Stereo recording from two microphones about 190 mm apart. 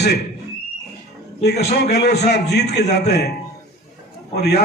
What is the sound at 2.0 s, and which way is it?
A man's voice, 60° left (ahead or behind).